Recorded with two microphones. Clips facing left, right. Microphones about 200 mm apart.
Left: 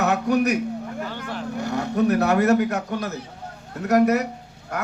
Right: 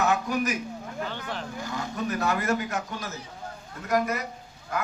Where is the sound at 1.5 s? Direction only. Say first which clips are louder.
Left 13 dB; 65° left (ahead or behind).